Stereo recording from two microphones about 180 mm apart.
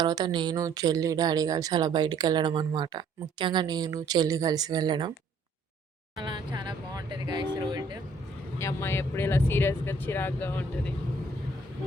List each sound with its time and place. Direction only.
0.0 s speech: 20° right (ahead or behind)
6.1 s speech: 25° right (ahead or behind)
8.5 s speech: 15° left (ahead or behind)